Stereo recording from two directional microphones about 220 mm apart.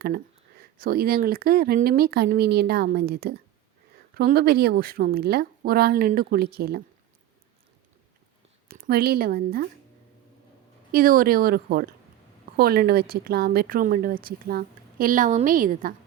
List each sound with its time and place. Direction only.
0.6 s speech: 45° right (ahead or behind)
8.6 s speech: 45° right (ahead or behind)
10.9 s speech: 40° right (ahead or behind)